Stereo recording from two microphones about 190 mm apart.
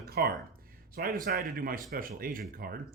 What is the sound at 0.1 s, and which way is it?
Speech, 55° right (ahead or behind).